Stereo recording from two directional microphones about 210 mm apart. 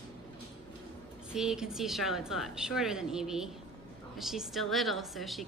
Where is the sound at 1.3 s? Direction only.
5° right (ahead or behind).